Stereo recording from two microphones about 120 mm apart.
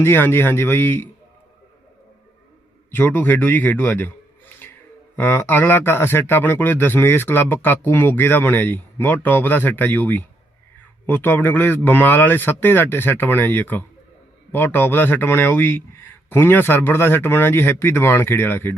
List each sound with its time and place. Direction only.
0.0 s speech: 20° left (ahead or behind)
2.9 s a man's voice: 15° left (ahead or behind)
5.1 s a man's voice: 15° left (ahead or behind)